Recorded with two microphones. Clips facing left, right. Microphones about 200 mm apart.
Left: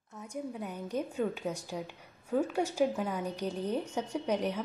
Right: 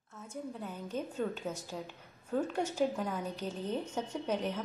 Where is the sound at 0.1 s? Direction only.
15° left (ahead or behind).